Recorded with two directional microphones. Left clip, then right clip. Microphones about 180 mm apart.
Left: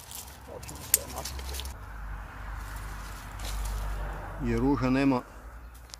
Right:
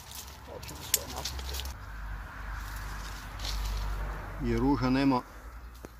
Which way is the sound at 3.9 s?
45° left (ahead or behind).